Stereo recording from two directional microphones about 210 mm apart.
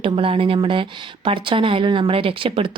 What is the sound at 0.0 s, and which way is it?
A woman's voice, 25° right (ahead or behind).